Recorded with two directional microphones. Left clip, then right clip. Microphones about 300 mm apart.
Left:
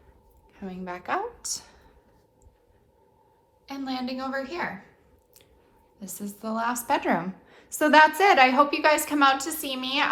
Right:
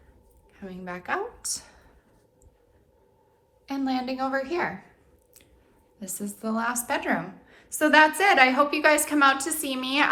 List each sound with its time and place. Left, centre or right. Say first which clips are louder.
0.5 s a woman's voice: left 1 dB; left; by 1.9 s centre
3.7 s a woman's voice: right 4 dB; centre
6.0 s a woman's voice: right 2 dB; centre